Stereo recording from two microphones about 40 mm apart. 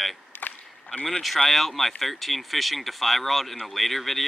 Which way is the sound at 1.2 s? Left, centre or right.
Centre.